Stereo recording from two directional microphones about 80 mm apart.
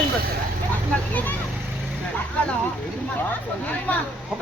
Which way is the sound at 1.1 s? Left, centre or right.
Left.